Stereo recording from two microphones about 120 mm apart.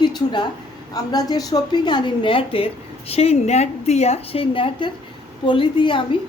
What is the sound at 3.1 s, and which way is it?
A woman's voice, 60° left (ahead or behind).